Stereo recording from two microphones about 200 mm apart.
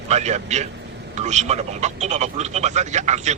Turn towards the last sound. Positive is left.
turn(degrees=-35)  # may be behind; listen again after turning